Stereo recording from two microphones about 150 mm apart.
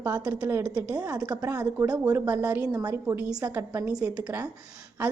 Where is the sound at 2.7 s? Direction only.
25° right (ahead or behind).